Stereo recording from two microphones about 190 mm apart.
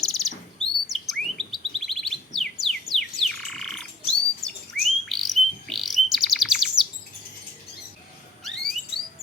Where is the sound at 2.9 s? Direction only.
Centre (ahead or behind).